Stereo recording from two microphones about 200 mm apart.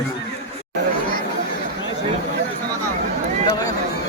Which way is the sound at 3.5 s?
20° left (ahead or behind).